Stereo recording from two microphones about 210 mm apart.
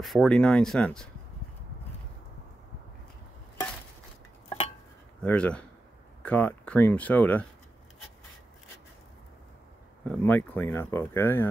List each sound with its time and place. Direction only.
0.0 s speech: centre (ahead or behind)
4.5 s dishes: 25° left (ahead or behind)
5.2 s speech: 5° left (ahead or behind)
10.0 s speech: 10° left (ahead or behind)